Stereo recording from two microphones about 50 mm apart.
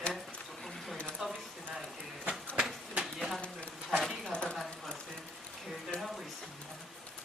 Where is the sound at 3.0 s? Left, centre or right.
Centre.